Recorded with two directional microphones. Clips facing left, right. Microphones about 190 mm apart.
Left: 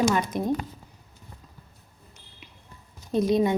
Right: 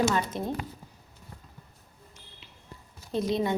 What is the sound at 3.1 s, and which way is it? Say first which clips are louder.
Speech: left 5 dB; 20° left (ahead or behind).